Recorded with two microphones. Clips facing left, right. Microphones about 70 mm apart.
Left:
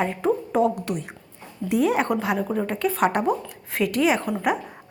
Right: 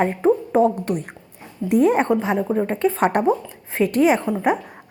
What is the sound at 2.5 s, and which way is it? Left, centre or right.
A woman's voice, right.